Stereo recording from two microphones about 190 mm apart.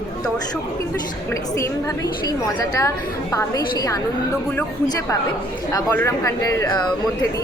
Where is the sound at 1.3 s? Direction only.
15° left (ahead or behind).